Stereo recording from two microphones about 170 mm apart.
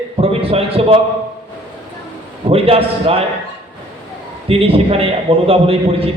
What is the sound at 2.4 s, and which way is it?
Speech, 35° right (ahead or behind).